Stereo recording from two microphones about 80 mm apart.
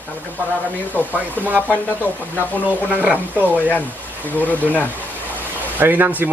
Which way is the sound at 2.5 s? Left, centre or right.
Centre.